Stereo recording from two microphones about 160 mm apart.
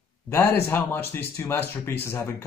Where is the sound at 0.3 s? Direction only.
15° left (ahead or behind).